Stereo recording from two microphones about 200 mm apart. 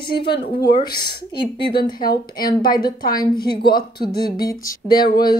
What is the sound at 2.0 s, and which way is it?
Speech, 45° left (ahead or behind).